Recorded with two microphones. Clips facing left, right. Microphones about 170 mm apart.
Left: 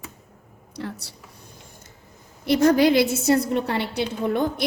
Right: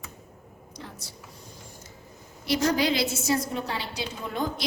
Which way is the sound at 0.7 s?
70° left (ahead or behind).